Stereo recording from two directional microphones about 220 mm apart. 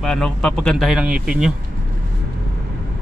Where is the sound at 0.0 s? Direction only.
5° left (ahead or behind).